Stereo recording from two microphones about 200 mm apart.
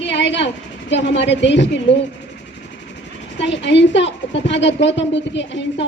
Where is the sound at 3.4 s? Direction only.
60° left (ahead or behind).